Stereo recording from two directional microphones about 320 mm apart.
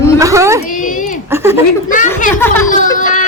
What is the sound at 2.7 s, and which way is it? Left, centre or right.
Speech, left.